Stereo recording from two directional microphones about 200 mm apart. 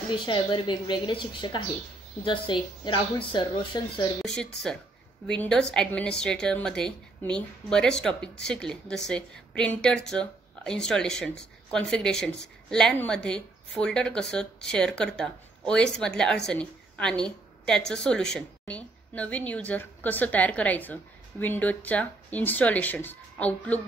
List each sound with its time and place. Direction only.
0.1 s speech: 25° left (ahead or behind)
4.4 s a woman's voice: 5° left (ahead or behind)